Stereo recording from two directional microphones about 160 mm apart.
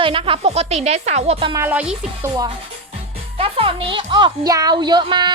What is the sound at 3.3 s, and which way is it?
Speech, 35° right (ahead or behind).